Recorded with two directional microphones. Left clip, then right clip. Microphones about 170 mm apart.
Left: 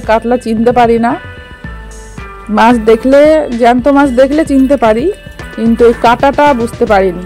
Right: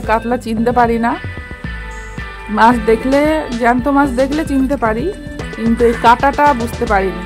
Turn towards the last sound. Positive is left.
turn(degrees=25)  # may be behind; listen again after turning